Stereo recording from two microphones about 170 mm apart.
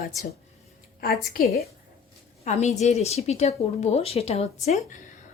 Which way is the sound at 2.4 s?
40° left (ahead or behind).